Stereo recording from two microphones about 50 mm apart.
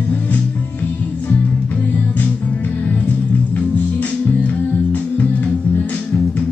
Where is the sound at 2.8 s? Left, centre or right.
Left.